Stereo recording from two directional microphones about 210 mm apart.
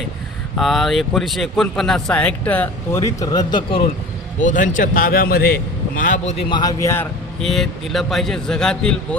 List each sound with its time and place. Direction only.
0.5 s a man's voice: centre (ahead or behind); by 3.8 s 25° left (ahead or behind)
4.4 s a man's voice: 35° left (ahead or behind)
6.5 s a man's voice: 20° left (ahead or behind)